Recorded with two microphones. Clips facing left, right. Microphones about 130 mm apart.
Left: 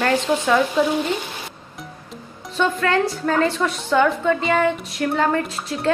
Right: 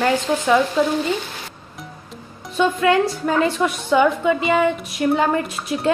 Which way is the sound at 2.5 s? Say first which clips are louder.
Right 3 dB; 15° right (ahead or behind).